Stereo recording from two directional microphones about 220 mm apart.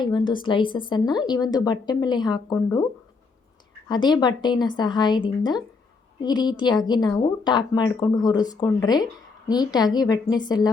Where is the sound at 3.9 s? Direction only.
20° left (ahead or behind).